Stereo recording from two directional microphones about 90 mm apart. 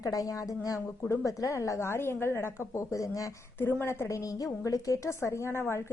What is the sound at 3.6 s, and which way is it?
A woman's voice, 25° left (ahead or behind).